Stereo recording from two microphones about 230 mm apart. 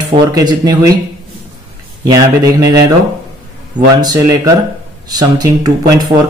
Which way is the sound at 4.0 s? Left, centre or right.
Centre.